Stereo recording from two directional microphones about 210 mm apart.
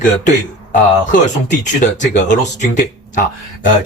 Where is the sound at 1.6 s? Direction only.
35° left (ahead or behind).